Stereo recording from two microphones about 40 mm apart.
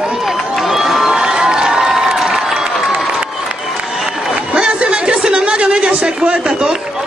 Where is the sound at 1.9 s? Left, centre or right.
Centre.